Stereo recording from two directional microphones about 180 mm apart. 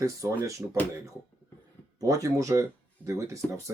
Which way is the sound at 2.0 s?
20° right (ahead or behind).